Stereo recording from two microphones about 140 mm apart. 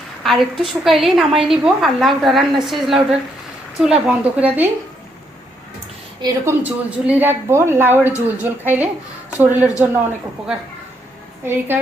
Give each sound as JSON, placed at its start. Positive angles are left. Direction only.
{"t": 0.2, "sound": "a woman's voice", "side_deg": 0}
{"t": 6.2, "sound": "a woman's voice", "side_deg": -20}
{"t": 11.4, "sound": "a woman's voice", "side_deg": -15}